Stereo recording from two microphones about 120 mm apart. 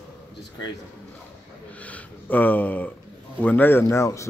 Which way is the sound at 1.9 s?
15° left (ahead or behind).